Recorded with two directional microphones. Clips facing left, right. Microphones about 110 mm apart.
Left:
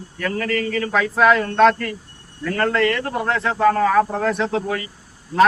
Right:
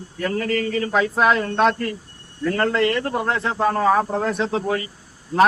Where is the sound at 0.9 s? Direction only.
20° right (ahead or behind).